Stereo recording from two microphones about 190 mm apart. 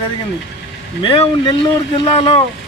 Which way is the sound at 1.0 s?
25° left (ahead or behind).